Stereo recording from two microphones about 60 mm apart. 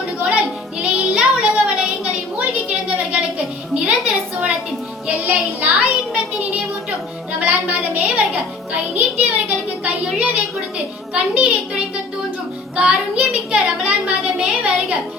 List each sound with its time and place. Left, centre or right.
0.8 s child singing: centre
3.8 s a sound: centre
5.0 s music: right
7.3 s music: right
10.2 s a woman's voice: right